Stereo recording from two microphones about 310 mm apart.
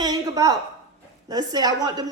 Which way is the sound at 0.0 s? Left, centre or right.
Centre.